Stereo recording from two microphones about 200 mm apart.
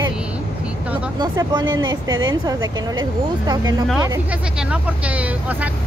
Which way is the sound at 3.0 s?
20° right (ahead or behind).